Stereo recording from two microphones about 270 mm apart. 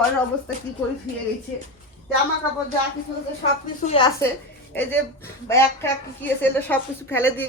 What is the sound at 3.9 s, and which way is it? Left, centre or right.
Speech, centre.